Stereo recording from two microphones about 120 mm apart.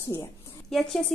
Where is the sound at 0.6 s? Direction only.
5° left (ahead or behind).